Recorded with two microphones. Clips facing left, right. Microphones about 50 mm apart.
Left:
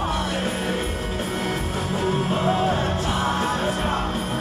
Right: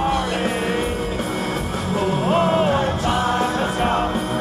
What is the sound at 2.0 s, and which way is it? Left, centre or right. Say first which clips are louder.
Music: right 5 dB; right.